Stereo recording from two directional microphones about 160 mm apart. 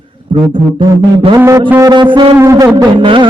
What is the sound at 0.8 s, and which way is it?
Music, 25° right (ahead or behind).